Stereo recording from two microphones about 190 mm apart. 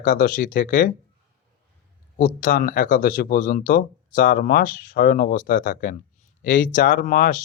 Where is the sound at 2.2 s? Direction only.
50° left (ahead or behind).